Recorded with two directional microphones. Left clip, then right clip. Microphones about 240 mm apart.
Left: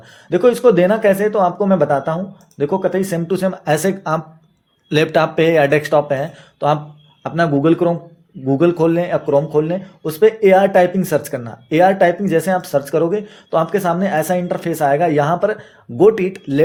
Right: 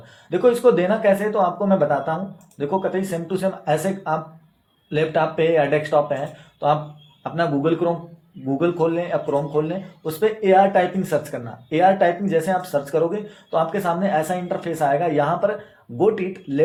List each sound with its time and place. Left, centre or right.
0.3 s speech: left